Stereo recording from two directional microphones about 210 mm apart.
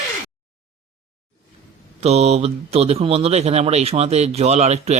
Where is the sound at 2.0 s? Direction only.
30° right (ahead or behind).